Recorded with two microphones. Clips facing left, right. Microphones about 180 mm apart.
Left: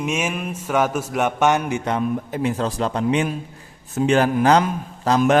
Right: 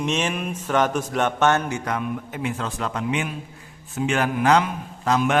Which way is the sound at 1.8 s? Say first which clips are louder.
Left 5 dB; 30° left (ahead or behind).